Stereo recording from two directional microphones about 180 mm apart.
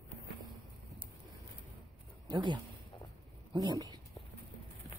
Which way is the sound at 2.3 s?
25° right (ahead or behind).